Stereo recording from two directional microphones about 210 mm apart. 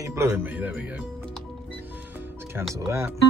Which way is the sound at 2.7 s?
15° right (ahead or behind).